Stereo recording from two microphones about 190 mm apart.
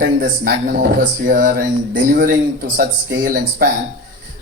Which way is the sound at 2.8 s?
50° right (ahead or behind).